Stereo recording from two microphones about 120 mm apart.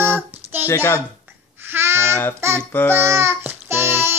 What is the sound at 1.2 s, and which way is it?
Babbling, 20° right (ahead or behind).